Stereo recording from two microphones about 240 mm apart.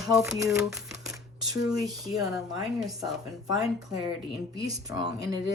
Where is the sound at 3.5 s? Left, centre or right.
Centre.